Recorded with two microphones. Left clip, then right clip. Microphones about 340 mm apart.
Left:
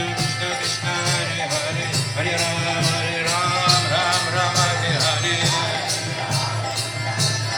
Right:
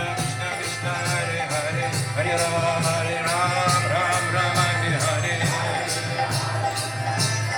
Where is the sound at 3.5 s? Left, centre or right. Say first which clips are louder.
Left 3 dB; centre.